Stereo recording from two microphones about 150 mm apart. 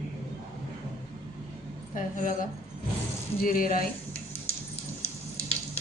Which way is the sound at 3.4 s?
70° left (ahead or behind).